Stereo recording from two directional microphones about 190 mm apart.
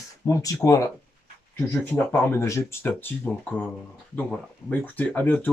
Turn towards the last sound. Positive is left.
turn(degrees=10)  # may be behind; listen again after turning